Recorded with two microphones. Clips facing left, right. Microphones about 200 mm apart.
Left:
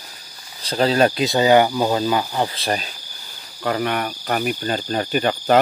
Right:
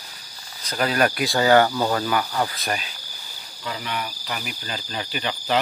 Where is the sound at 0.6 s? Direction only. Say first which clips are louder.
Left 5 dB; 25° left (ahead or behind).